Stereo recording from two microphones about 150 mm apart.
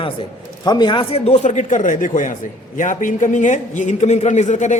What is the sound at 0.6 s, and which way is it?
A man's voice, 30° left (ahead or behind).